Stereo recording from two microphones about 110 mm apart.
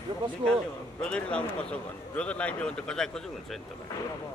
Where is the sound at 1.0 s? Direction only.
10° left (ahead or behind).